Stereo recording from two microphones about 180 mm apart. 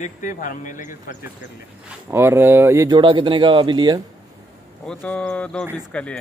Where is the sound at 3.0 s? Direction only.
25° right (ahead or behind).